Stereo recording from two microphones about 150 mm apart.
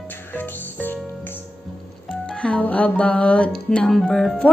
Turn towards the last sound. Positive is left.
turn(degrees=0)  # may be behind; listen again after turning